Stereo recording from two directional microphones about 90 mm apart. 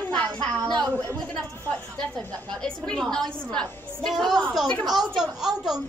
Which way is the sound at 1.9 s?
5° left (ahead or behind).